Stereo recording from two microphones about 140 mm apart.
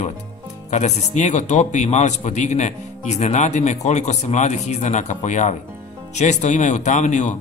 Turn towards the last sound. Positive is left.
turn(degrees=60)  # may be behind; listen again after turning